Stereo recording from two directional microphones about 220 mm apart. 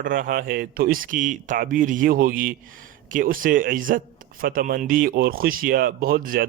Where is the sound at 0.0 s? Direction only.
40° right (ahead or behind).